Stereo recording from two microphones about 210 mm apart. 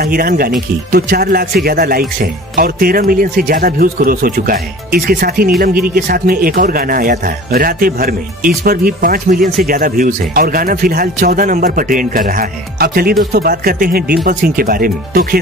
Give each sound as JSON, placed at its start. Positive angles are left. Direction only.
{"t": 0.0, "sound": "a man's voice", "side_deg": -45}